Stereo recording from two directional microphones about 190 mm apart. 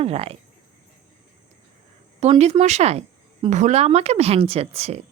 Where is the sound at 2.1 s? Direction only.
35° right (ahead or behind).